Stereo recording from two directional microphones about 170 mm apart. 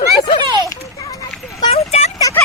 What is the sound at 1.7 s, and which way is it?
Vehicle, 40° left (ahead or behind).